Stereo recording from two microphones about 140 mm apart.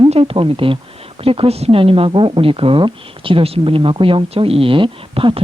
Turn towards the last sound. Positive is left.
turn(degrees=-40)  # may be behind; listen again after turning